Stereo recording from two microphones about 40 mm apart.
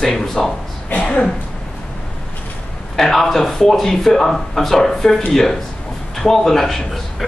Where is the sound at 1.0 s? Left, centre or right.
Left.